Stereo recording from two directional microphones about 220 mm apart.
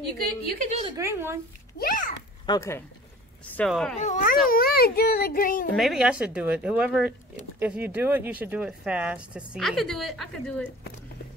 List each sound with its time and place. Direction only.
0.7 s a woman's voice: 30° right (ahead or behind)
0.9 s speech: 10° right (ahead or behind)
1.8 s a child's voice: 40° left (ahead or behind)
2.4 s speech: 15° left (ahead or behind)
3.5 s speech: centre (ahead or behind)
4.0 s a child's voice: 35° left (ahead or behind)
5.8 s speech: centre (ahead or behind)